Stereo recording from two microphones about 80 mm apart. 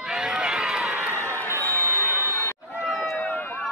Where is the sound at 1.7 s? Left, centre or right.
Left.